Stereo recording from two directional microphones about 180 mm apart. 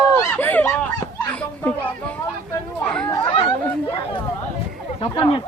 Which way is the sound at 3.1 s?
30° left (ahead or behind).